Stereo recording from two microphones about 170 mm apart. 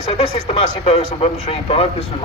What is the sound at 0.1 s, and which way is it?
Speech, 35° left (ahead or behind).